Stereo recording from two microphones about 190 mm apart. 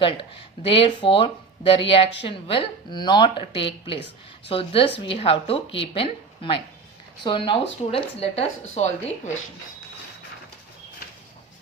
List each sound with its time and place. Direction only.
0.0 s a woman's voice: 25° left (ahead or behind)